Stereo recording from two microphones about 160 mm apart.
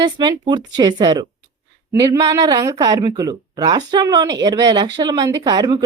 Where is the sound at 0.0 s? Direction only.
30° right (ahead or behind).